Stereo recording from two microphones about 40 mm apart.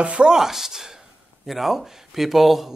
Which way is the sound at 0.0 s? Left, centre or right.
Right.